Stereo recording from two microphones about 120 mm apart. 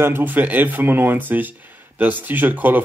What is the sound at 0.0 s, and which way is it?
Speech, 15° right (ahead or behind).